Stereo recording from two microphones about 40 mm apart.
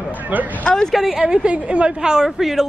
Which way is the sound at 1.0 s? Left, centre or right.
Centre.